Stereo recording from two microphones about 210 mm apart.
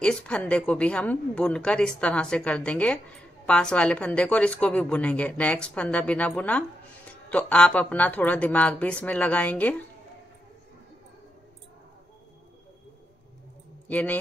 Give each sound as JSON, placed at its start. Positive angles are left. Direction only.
{"t": 0.0, "sound": "speech", "side_deg": 5}
{"t": 13.8, "sound": "speech", "side_deg": 5}